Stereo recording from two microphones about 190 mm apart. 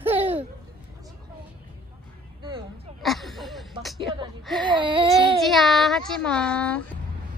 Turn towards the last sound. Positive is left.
turn(degrees=5)  # may be behind; listen again after turning